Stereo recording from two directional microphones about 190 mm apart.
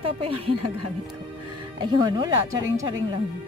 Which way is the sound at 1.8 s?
25° right (ahead or behind).